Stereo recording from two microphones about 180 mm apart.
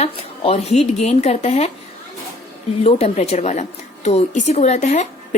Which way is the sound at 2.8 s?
35° left (ahead or behind).